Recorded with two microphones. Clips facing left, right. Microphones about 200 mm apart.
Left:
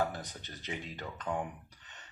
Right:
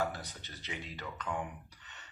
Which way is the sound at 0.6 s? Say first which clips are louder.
Left 2 dB; 45° left (ahead or behind).